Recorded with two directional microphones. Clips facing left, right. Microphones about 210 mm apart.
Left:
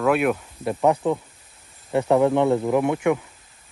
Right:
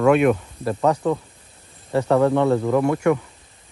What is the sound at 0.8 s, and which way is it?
Speech, 15° left (ahead or behind).